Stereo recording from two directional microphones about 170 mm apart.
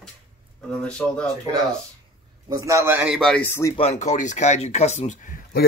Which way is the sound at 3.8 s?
40° left (ahead or behind).